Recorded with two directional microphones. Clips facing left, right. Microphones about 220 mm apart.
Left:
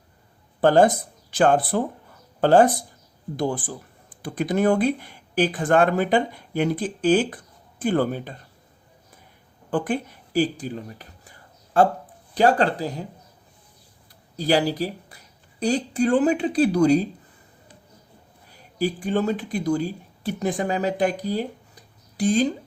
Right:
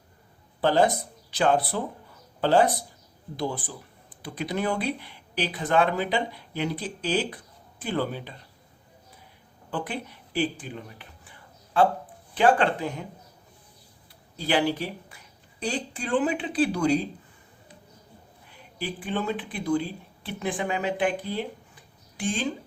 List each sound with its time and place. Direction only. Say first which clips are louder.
0.6 s speech: left 5 dB; 50° left (ahead or behind)
9.6 s a sound: left 8 dB; 50° left (ahead or behind)
12.3 s speech: left 2 dB; 40° left (ahead or behind)
14.3 s speech: left 4 dB; 40° left (ahead or behind)
18.4 s speech: left 9 dB; 40° left (ahead or behind)